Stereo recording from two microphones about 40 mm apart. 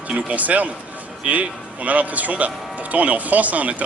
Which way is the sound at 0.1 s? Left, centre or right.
Right.